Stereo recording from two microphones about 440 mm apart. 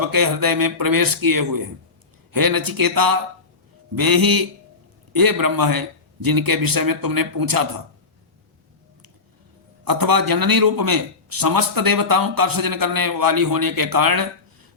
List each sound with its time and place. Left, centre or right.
0.0 s a man's voice: right
9.8 s a man's voice: right